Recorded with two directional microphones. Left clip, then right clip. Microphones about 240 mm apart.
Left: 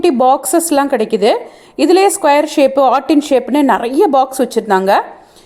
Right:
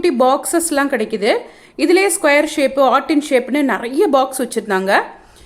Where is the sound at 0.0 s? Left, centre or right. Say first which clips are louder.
Left 3 dB; centre.